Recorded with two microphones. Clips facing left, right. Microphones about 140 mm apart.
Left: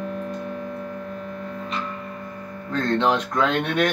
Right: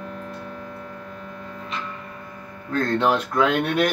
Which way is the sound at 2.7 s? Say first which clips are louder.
Even; 5° right (ahead or behind).